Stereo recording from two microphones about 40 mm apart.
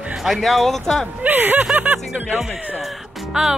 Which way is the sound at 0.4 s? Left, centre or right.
Centre.